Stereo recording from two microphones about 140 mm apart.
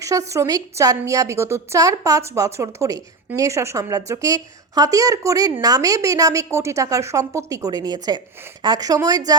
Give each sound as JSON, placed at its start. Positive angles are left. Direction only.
{"t": 0.0, "sound": "a woman's voice", "side_deg": -25}